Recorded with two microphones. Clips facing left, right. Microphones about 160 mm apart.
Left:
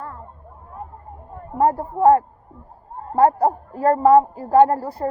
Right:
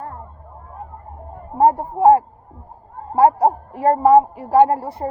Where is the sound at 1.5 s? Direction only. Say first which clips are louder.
Right 3 dB; 25° right (ahead or behind).